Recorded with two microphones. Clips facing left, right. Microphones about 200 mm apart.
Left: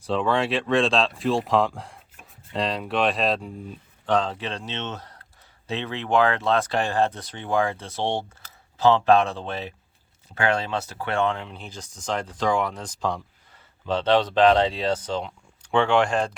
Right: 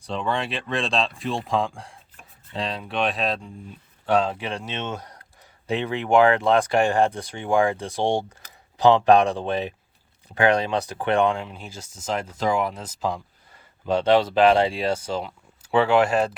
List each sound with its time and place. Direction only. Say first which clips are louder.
0.0 s speech: left 4 dB; centre (ahead or behind)